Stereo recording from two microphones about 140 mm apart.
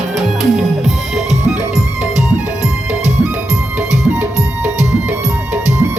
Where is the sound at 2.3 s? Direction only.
55° right (ahead or behind).